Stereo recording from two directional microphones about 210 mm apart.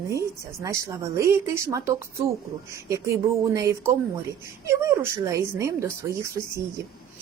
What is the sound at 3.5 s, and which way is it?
A woman's voice, 15° right (ahead or behind).